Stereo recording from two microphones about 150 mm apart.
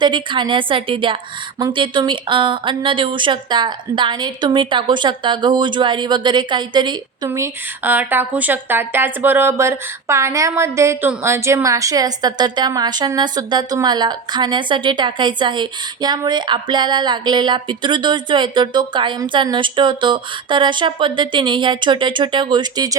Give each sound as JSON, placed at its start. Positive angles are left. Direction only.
{"t": 0.0, "sound": "a woman's voice", "side_deg": -30}
{"t": 7.3, "sound": "speech", "side_deg": -15}